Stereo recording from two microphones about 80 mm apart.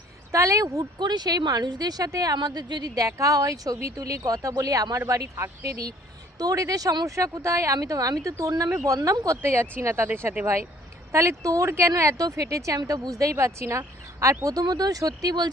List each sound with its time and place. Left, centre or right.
0.3 s speech: right
0.9 s speech: right
2.9 s speech: right
9.0 s speech: right
9.2 s speech: right
13.3 s speech: right
14.4 s speech: right